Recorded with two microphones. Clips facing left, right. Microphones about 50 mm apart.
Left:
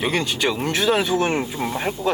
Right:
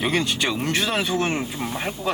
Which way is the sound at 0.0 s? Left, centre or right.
Centre.